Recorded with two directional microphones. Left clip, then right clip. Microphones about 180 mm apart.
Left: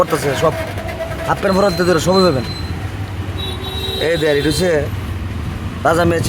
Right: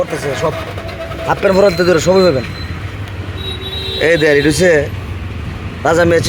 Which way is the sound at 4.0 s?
5° right (ahead or behind).